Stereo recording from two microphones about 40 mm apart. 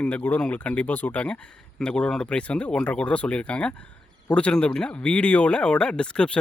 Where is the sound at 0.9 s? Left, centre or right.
Left.